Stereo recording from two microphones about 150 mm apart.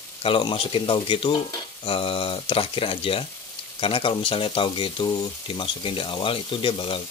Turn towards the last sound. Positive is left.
turn(degrees=35)  # may be behind; listen again after turning